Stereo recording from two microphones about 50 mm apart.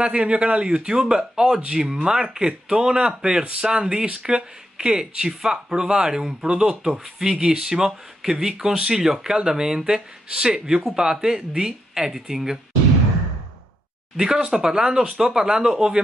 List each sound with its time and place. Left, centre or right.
0.0 s speech: right
14.1 s speech: centre